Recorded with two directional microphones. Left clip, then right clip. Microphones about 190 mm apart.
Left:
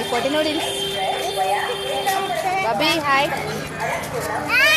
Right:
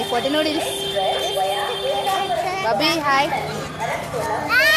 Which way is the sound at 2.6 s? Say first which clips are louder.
Right 2 dB; 10° right (ahead or behind).